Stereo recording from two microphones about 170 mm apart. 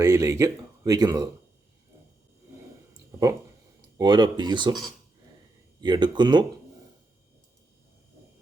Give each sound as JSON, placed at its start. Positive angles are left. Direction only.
{"t": 0.0, "sound": "speech", "side_deg": -20}
{"t": 3.8, "sound": "speech", "side_deg": -25}
{"t": 5.8, "sound": "speech", "side_deg": -25}